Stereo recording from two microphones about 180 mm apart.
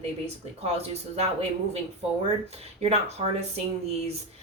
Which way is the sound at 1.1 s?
35° right (ahead or behind).